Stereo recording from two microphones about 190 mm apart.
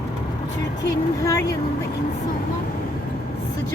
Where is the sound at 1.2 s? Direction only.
15° left (ahead or behind).